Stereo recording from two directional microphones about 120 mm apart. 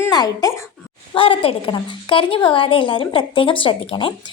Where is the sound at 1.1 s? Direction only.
50° left (ahead or behind).